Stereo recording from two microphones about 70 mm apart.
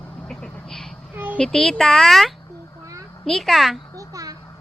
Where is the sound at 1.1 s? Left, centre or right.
Right.